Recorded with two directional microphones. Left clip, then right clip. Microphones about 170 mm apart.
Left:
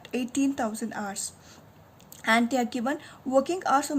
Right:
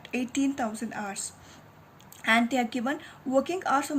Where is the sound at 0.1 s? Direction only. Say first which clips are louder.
Left 1 dB; 50° left (ahead or behind).